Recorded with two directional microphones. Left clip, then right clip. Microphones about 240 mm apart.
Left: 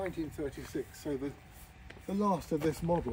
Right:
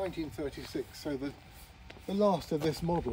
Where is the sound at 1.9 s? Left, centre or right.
Right.